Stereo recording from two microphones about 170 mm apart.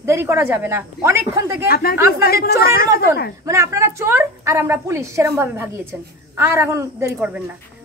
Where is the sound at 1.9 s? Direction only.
15° right (ahead or behind).